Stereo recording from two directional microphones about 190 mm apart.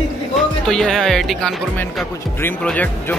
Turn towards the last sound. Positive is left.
turn(degrees=5)  # may be behind; listen again after turning